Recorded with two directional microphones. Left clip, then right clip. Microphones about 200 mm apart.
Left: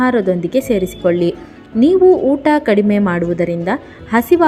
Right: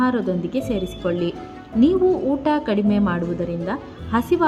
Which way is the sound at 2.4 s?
20° left (ahead or behind).